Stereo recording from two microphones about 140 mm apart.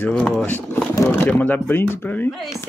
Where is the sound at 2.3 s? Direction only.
Centre (ahead or behind).